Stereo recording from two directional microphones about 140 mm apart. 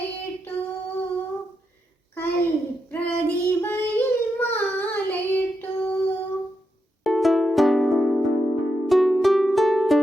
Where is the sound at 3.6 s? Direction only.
15° left (ahead or behind).